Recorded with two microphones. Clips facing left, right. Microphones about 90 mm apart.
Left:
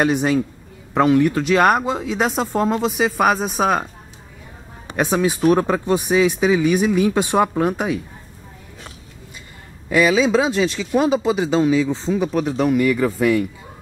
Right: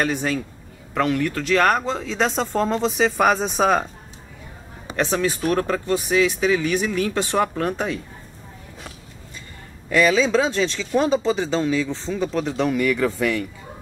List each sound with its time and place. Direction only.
0.0 s speech: 20° left (ahead or behind)
4.9 s speech: 15° left (ahead or behind)
9.8 s speech: 10° left (ahead or behind)